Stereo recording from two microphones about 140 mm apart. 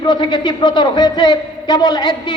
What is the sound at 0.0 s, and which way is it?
A woman's voice, 30° left (ahead or behind).